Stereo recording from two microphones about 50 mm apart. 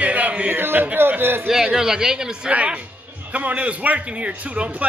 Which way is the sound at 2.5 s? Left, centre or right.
Right.